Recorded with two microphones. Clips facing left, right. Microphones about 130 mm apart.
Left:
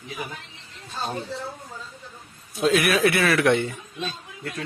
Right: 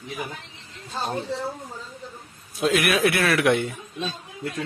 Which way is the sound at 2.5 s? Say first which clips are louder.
Left 1 dB; centre (ahead or behind).